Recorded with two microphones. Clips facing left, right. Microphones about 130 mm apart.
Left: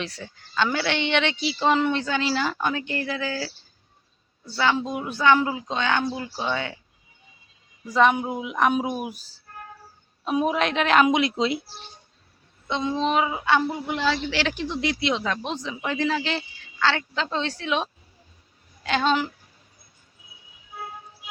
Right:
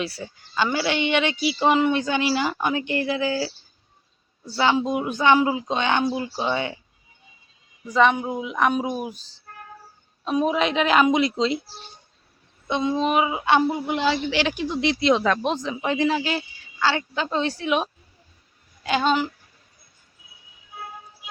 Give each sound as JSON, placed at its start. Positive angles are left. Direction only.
{"t": 0.0, "sound": "a woman's voice", "side_deg": -10}
{"t": 4.5, "sound": "a woman's voice", "side_deg": -20}
{"t": 7.9, "sound": "a woman's voice", "side_deg": 0}
{"t": 10.2, "sound": "a woman's voice", "side_deg": 5}
{"t": 12.6, "sound": "a woman's voice", "side_deg": -10}
{"t": 14.9, "sound": "speech", "side_deg": -40}
{"t": 15.2, "sound": "speech", "side_deg": -60}
{"t": 15.8, "sound": "a woman's voice", "side_deg": -20}